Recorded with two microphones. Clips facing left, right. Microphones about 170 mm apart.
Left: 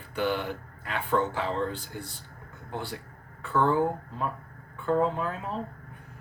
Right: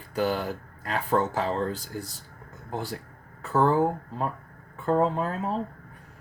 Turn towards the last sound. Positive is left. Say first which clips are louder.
# right 2 dB
turn(degrees=-35)  # may be behind; listen again after turning